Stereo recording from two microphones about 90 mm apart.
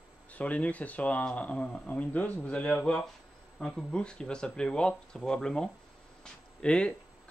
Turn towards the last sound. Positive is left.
turn(degrees=10)  # may be behind; listen again after turning